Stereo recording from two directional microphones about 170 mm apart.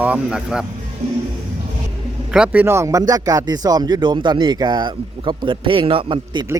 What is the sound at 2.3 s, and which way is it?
Speech, 10° right (ahead or behind).